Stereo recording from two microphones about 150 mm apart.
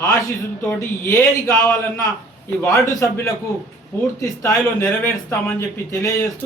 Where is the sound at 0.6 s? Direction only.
20° left (ahead or behind).